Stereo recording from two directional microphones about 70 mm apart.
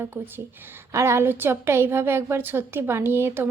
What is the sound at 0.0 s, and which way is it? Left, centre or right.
A woman's voice, right.